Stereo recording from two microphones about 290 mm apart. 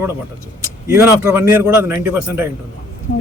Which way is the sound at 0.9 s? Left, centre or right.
Centre.